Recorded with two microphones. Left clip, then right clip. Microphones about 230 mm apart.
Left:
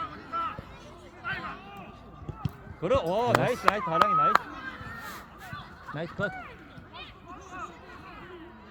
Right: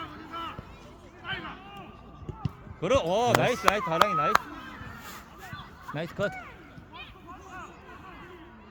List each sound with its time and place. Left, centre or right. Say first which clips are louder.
0.0 s a sound: left 5 dB; centre
2.8 s speech: right 1 dB; right
5.9 s speech: right 1 dB; right